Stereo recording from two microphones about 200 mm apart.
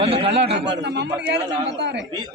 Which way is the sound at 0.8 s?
60° right (ahead or behind).